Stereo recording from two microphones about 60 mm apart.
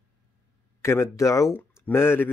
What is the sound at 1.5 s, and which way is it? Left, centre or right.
Speech, left.